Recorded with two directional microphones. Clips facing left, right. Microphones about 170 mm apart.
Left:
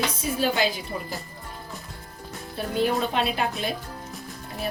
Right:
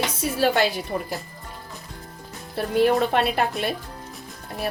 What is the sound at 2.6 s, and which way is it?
Speech, 70° right (ahead or behind).